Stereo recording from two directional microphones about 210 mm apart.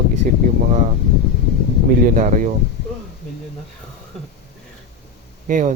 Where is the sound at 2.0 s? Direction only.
40° right (ahead or behind).